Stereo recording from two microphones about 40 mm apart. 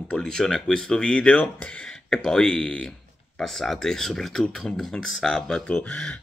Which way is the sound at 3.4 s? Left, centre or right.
Centre.